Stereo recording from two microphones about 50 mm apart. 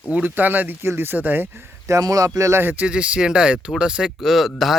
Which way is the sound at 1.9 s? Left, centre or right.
Right.